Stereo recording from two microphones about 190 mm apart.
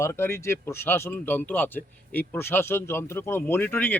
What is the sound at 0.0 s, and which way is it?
Speech, 15° left (ahead or behind).